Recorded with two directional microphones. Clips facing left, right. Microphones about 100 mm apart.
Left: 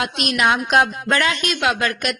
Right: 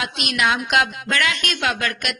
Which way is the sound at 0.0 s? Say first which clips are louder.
Left 3 dB; 40° left (ahead or behind).